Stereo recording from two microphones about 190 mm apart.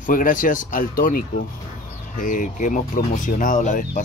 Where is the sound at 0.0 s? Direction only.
45° left (ahead or behind).